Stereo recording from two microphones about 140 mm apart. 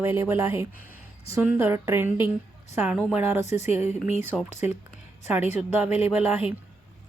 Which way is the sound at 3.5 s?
50° left (ahead or behind).